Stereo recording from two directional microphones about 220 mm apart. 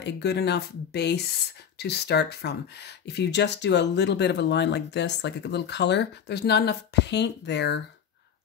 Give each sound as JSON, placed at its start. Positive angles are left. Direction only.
{"t": 0.0, "sound": "speech", "side_deg": 50}